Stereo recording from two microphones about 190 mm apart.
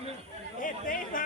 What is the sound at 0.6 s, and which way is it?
Chatter, 45° left (ahead or behind).